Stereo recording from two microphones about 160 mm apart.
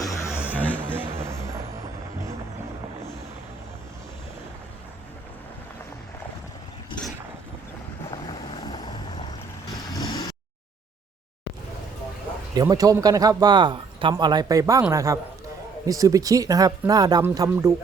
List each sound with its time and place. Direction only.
0.0 s a sound: 20° left (ahead or behind)
0.5 s music: 10° left (ahead or behind)
8.3 s vehicle: 30° left (ahead or behind)
12.5 s speech: 20° right (ahead or behind)